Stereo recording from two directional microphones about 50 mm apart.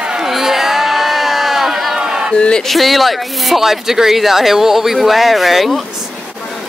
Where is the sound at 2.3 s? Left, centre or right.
Centre.